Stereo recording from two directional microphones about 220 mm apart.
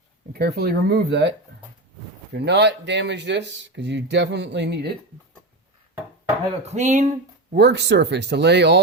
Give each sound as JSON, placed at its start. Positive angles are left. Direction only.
{"t": 0.3, "sound": "speech", "side_deg": -45}
{"t": 2.3, "sound": "speech", "side_deg": -50}
{"t": 6.7, "sound": "speech", "side_deg": -30}
{"t": 7.5, "sound": "speech", "side_deg": -50}